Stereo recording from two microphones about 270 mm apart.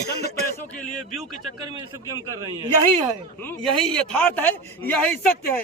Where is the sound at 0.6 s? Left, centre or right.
Centre.